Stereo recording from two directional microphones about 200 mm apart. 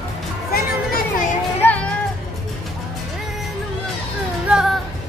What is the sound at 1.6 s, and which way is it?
Music, 10° left (ahead or behind).